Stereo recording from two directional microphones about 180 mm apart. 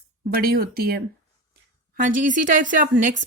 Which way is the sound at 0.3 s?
55° right (ahead or behind).